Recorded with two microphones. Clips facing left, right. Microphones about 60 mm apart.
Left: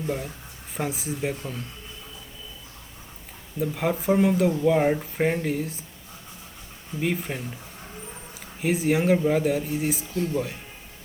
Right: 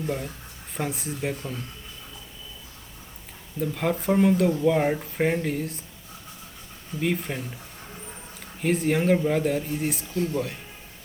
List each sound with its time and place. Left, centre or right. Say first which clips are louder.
0.7 s speech: left 1 dB; centre
3.6 s speech: even; centre
7.0 s speech: even; centre
8.6 s speech: even; centre